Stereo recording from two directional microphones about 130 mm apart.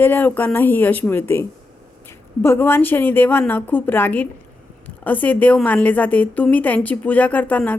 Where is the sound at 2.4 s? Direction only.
15° left (ahead or behind).